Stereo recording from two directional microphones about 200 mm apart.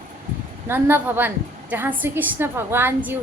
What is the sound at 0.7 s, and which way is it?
A woman's voice, 10° right (ahead or behind).